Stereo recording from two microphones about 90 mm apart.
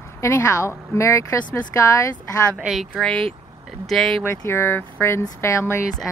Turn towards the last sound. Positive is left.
turn(degrees=30)  # may be behind; listen again after turning